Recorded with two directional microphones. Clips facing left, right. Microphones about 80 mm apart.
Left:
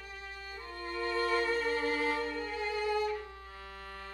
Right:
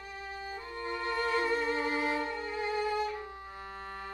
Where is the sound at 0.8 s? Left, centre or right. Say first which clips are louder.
Even; right.